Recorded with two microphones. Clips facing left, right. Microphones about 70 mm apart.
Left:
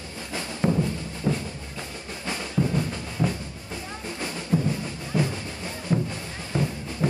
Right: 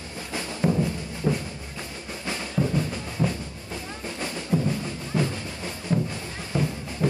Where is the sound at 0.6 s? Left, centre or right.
Centre.